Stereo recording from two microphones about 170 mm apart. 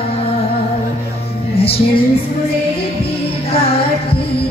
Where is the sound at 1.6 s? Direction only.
35° left (ahead or behind).